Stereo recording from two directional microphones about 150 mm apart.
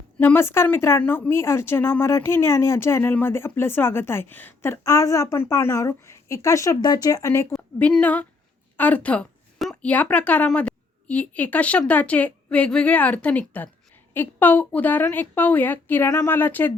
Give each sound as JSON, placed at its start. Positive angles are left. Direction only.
{"t": 0.2, "sound": "speech", "side_deg": 15}